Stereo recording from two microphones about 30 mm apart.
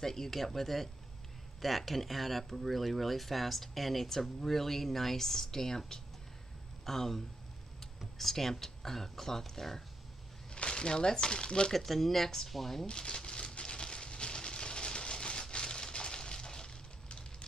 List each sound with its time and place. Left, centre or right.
0.0 s speech: centre
10.5 s speech: left
11.7 s speech: centre
12.8 s speech: left
13.1 s a sound: left